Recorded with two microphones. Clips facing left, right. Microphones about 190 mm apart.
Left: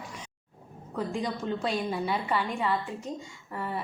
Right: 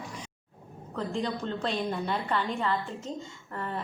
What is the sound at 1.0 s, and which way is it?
A woman's voice, 10° left (ahead or behind).